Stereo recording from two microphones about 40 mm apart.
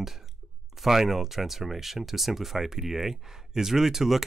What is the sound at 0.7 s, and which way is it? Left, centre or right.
Speech, centre.